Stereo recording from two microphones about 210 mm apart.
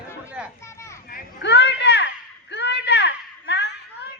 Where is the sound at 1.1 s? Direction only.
55° left (ahead or behind).